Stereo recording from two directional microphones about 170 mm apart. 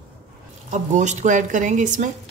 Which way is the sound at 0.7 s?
45° right (ahead or behind).